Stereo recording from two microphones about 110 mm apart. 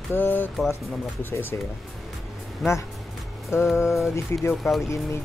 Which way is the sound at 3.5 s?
25° left (ahead or behind).